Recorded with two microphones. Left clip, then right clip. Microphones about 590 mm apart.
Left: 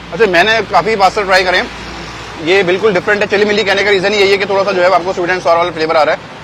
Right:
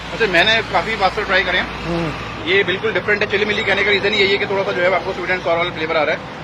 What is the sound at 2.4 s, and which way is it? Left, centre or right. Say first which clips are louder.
Speech: left 6 dB; left.